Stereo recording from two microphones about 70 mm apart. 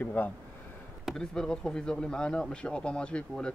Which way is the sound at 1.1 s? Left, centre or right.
Centre.